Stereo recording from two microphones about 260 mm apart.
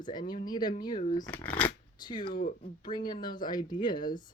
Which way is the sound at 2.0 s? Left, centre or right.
Centre.